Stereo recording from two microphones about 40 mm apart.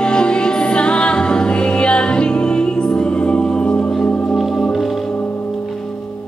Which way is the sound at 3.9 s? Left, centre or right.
Centre.